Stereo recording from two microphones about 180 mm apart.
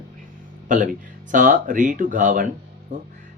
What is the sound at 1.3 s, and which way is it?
Music, 50° right (ahead or behind).